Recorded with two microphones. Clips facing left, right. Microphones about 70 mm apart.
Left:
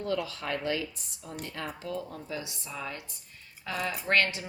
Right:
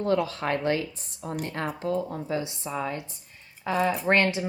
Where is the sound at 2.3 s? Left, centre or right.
Right.